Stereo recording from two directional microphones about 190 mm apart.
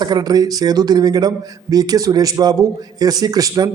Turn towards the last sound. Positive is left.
turn(degrees=-20)  # may be behind; listen again after turning